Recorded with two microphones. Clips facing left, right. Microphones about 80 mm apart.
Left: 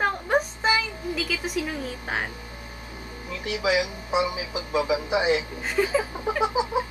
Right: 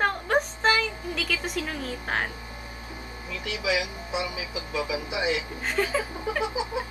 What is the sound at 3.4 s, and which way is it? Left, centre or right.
Speech, left.